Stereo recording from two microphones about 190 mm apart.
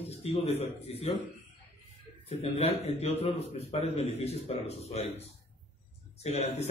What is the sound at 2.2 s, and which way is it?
Speech, 35° left (ahead or behind).